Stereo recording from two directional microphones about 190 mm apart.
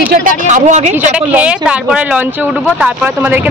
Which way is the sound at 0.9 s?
5° right (ahead or behind).